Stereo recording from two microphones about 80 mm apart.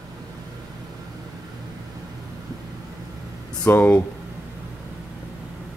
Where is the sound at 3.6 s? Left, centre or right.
Left.